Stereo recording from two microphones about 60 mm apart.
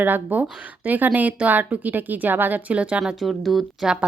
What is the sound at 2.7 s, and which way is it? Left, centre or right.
Speech, right.